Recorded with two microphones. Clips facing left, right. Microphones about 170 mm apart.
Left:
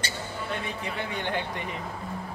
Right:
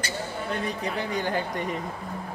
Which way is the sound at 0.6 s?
40° right (ahead or behind).